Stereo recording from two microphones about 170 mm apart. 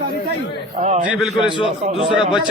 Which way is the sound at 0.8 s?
45° right (ahead or behind).